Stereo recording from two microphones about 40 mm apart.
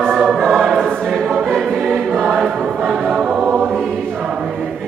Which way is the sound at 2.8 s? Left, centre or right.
Centre.